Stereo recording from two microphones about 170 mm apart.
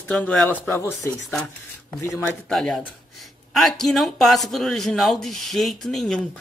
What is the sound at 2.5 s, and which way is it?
Speech, 5° left (ahead or behind).